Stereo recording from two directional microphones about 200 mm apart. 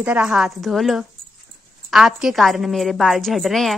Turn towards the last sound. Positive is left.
turn(degrees=0)  # may be behind; listen again after turning